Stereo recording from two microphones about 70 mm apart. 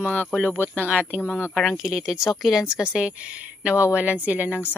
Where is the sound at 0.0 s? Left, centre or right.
Left.